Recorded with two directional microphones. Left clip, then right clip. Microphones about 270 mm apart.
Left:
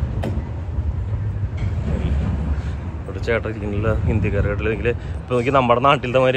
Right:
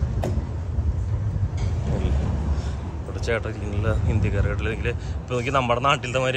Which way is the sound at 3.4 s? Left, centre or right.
Centre.